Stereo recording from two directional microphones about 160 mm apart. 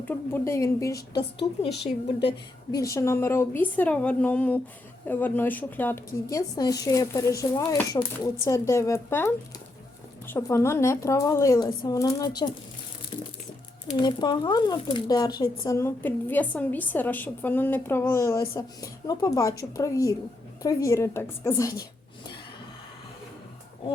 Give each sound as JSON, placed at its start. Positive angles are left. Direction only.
{"t": 0.0, "sound": "a woman's voice", "side_deg": 10}
{"t": 1.7, "sound": "a woman's voice", "side_deg": 90}
{"t": 2.7, "sound": "a woman's voice", "side_deg": 20}
{"t": 13.9, "sound": "speech", "side_deg": 30}